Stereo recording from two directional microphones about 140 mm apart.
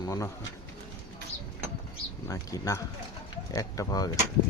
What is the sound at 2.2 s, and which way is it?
Speech, 25° left (ahead or behind).